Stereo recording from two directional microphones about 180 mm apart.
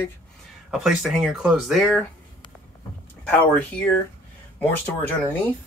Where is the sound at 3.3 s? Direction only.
10° left (ahead or behind).